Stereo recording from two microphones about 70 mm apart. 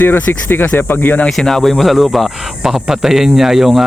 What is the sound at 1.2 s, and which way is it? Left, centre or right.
Speech, centre.